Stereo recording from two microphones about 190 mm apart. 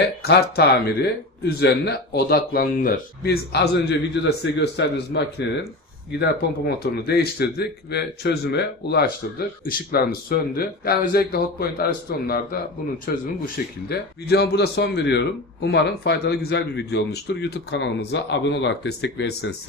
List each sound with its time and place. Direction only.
0.2 s a man's voice: 55° left (ahead or behind)
6.8 s a man's voice: 55° left (ahead or behind)